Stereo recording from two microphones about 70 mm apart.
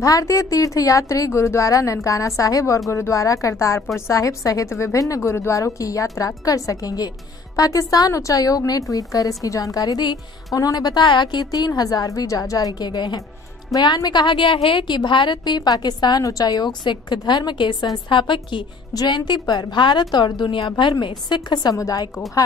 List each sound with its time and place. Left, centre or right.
0.0 s a woman's voice: left
16.3 s a woman's voice: left
18.9 s a woman's voice: left
21.7 s a woman's voice: left